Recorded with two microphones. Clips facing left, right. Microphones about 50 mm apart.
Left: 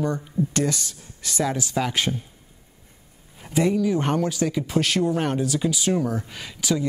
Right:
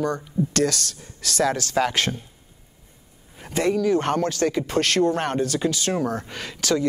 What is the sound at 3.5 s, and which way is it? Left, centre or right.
Speech, centre.